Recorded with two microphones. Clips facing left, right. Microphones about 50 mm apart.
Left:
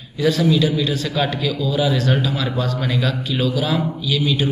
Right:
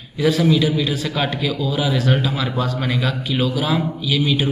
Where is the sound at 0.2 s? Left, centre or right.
Centre.